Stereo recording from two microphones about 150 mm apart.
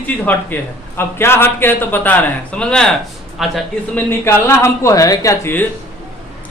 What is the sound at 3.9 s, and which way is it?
Speech, 15° left (ahead or behind).